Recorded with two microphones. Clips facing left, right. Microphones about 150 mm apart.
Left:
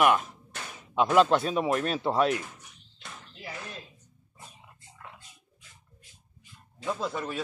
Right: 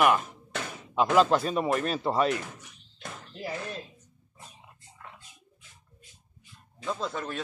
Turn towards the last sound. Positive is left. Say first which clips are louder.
# left 1 dB
turn(degrees=5)  # may be behind; listen again after turning